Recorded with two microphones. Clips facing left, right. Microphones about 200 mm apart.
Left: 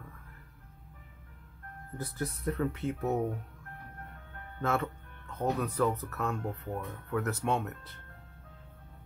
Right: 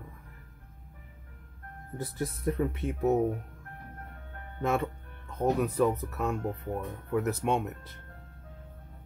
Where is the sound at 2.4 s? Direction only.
15° right (ahead or behind).